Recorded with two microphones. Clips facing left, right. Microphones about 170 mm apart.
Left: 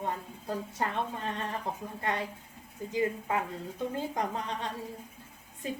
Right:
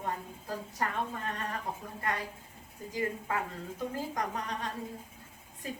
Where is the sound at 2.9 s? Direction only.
20° left (ahead or behind).